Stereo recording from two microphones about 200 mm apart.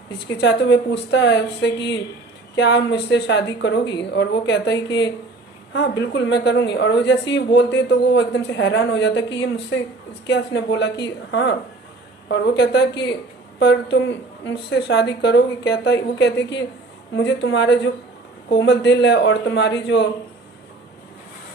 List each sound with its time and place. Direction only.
0.3 s speech: 60° left (ahead or behind)
6.0 s speech: 60° left (ahead or behind)